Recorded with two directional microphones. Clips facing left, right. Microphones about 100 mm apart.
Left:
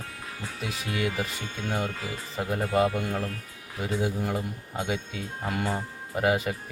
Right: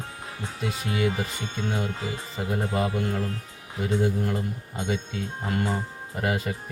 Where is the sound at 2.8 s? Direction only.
75° left (ahead or behind).